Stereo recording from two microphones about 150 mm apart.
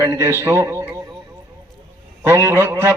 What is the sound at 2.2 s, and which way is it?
Speech, 15° right (ahead or behind).